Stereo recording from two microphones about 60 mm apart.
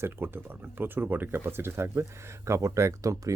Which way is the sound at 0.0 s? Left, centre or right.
Right.